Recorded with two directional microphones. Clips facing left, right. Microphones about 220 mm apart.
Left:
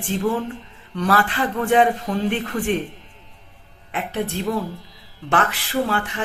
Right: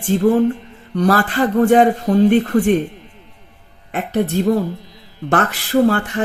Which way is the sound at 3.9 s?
45° right (ahead or behind).